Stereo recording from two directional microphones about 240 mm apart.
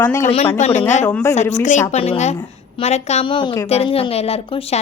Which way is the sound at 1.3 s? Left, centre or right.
Left.